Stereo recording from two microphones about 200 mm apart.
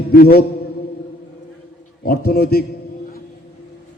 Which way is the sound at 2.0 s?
50° left (ahead or behind).